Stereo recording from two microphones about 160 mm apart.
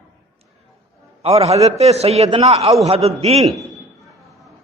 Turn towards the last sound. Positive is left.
turn(degrees=-40)  # may be behind; listen again after turning